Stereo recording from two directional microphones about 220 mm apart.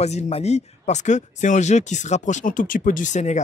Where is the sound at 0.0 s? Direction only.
30° left (ahead or behind).